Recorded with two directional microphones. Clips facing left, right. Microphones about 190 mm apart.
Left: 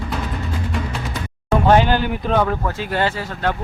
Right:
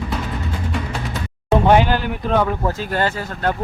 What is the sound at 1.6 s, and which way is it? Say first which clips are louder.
Speech: left 1 dB; 10° right (ahead or behind).